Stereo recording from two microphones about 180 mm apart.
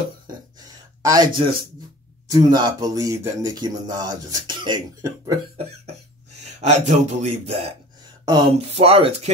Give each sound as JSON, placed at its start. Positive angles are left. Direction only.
{"t": 0.6, "sound": "a sound", "side_deg": -20}
{"t": 2.2, "sound": "speech", "side_deg": -20}
{"t": 6.6, "sound": "speech", "side_deg": -40}